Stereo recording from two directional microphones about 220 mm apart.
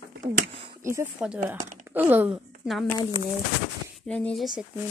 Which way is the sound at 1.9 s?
10° right (ahead or behind).